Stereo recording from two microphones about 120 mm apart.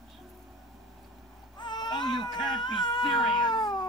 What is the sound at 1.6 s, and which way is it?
Baby cry, 40° left (ahead or behind).